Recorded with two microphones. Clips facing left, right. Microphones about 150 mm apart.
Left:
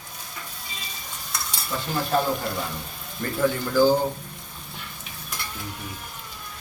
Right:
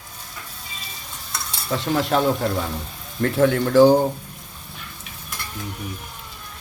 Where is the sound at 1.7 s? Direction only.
80° right.